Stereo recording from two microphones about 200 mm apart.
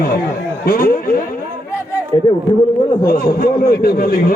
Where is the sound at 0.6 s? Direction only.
45° left (ahead or behind).